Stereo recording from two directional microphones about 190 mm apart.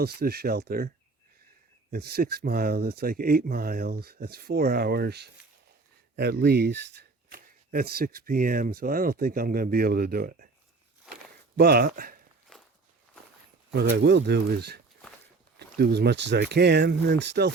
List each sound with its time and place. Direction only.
0.0 s speech: 55° right (ahead or behind)
1.9 s speech: 55° right (ahead or behind)
11.5 s speech: 55° right (ahead or behind)
12.5 s walk: 5° left (ahead or behind)
13.9 s speech: 65° right (ahead or behind)